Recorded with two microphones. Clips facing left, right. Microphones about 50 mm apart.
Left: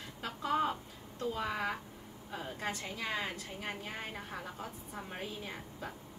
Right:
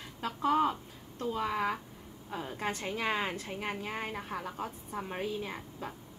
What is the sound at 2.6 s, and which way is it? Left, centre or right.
A woman's voice, right.